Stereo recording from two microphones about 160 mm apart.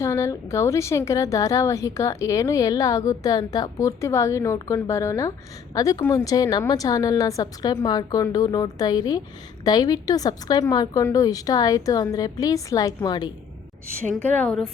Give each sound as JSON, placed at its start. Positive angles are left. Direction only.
{"t": 0.0, "sound": "a woman's voice", "side_deg": 20}
{"t": 14.2, "sound": "a woman's voice", "side_deg": 10}